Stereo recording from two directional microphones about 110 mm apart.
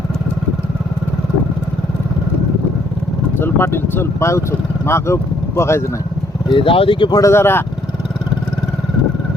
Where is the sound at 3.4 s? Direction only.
20° left (ahead or behind).